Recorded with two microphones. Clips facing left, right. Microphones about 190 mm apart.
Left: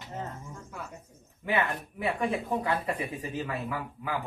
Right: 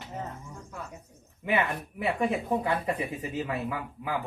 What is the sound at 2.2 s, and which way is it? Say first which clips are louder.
Speech: right 3 dB; 20° right (ahead or behind).